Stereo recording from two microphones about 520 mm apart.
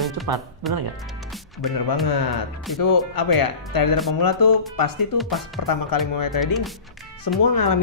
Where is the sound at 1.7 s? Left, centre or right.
Left.